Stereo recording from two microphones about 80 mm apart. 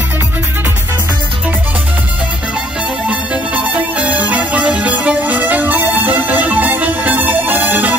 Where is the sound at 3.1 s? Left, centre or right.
Centre.